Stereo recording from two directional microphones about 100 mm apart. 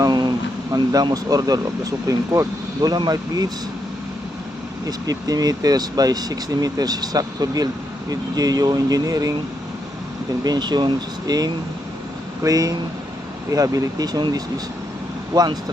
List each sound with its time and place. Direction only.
0.0 s speech: 45° right (ahead or behind)
4.9 s speech: 40° right (ahead or behind)
10.4 s speech: 45° right (ahead or behind)